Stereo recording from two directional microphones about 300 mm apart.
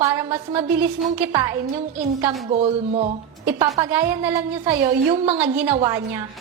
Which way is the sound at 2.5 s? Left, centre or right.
Right.